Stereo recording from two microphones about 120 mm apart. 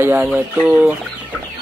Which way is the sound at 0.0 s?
15° right (ahead or behind).